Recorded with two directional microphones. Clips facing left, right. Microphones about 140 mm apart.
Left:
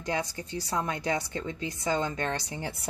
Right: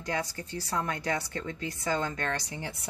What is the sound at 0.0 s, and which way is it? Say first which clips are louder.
A woman's voice: left 2 dB; 20° left (ahead or behind).